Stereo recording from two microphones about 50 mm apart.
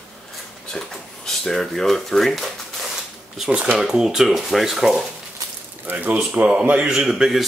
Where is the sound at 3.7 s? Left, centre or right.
Centre.